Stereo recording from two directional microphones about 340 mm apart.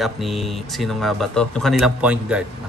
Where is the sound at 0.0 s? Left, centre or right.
Centre.